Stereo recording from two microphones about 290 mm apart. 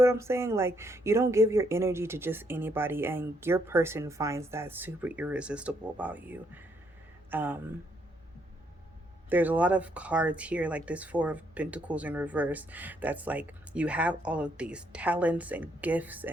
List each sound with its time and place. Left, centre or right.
0.0 s speech: centre
9.3 s speech: centre